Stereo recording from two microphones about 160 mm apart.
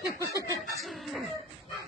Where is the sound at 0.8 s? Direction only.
Centre (ahead or behind).